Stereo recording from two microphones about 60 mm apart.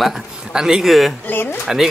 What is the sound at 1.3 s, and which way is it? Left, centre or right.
Speech, left.